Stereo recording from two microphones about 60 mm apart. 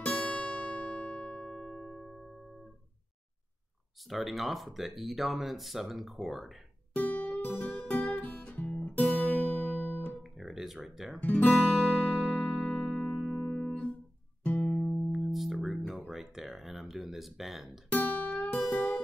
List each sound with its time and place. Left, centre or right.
0.0 s music: centre
4.1 s speech: centre
6.9 s guitar: left
7.6 s music: left
8.5 s guitar: left
10.2 s guitar: centre
11.1 s speech: left
12.3 s music: centre
14.4 s music: centre
15.0 s music: centre
15.9 s a sound: centre
17.9 s music: left